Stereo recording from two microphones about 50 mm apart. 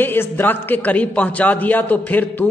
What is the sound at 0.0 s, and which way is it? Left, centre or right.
A man's voice, left.